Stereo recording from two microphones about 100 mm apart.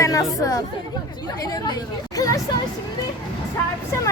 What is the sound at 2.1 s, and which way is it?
Speech, 35° left (ahead or behind).